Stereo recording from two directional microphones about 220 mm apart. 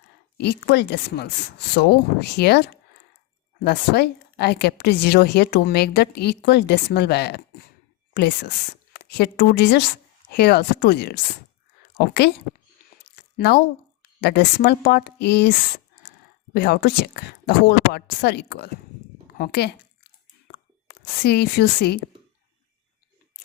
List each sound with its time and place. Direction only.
0.3 s a woman's voice: 50° left (ahead or behind)
13.3 s a woman's voice: 50° left (ahead or behind)